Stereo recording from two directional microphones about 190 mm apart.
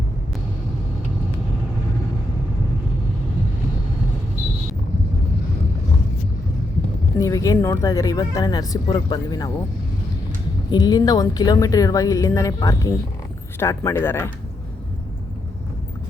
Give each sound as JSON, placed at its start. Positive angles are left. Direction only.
{"t": 7.2, "sound": "speech", "side_deg": 15}
{"t": 10.7, "sound": "speech", "side_deg": 20}